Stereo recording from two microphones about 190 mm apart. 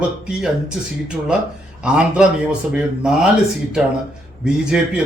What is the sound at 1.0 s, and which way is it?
A man's voice, 5° right (ahead or behind).